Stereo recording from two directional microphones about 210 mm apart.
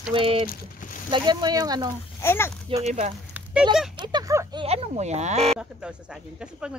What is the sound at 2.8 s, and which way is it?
Speech, 35° right (ahead or behind).